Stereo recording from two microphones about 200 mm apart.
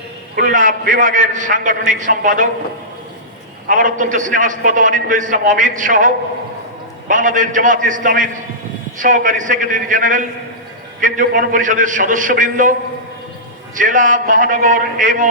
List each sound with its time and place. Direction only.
0.3 s a man's voice: 45° right (ahead or behind)
3.7 s a man's voice: 40° right (ahead or behind)
7.1 s a man's voice: 40° right (ahead or behind)
13.7 s a man's voice: 40° right (ahead or behind)